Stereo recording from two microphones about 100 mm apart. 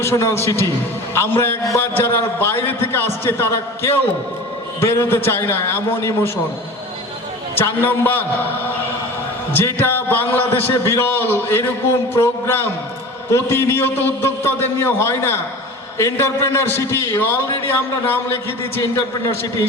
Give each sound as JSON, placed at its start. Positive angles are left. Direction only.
{"t": 0.0, "sound": "a man's voice", "side_deg": 30}
{"t": 7.5, "sound": "a man's voice", "side_deg": 20}
{"t": 9.6, "sound": "a man's voice", "side_deg": 25}